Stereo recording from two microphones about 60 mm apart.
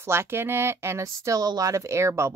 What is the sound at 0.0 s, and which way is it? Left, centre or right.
Speech, right.